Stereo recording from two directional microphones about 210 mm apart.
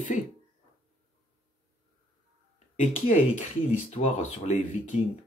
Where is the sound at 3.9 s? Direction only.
35° left (ahead or behind).